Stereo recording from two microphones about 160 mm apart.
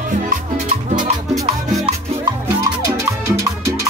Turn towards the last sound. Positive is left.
turn(degrees=-20)  # may be behind; listen again after turning